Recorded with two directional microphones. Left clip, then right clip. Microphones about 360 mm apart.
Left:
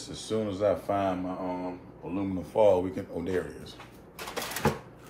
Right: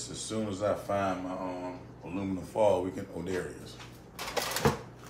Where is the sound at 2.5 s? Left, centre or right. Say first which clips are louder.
Left 4 dB; left.